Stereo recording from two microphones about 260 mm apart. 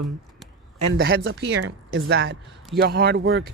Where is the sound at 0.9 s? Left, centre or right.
Right.